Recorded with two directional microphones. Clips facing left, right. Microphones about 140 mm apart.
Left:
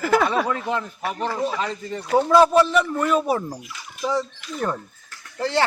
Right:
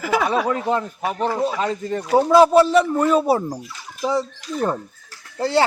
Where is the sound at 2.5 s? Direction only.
35° right (ahead or behind).